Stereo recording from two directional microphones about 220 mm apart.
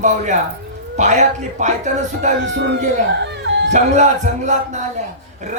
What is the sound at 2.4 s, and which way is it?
Male singing, 50° right (ahead or behind).